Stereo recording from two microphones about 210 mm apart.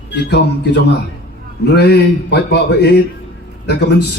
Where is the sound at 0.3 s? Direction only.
55° left (ahead or behind).